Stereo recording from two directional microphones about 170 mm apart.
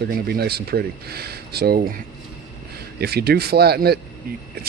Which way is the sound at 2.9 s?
70° right (ahead or behind).